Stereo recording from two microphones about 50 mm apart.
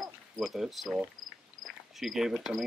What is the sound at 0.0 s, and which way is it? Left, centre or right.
Cricket, centre.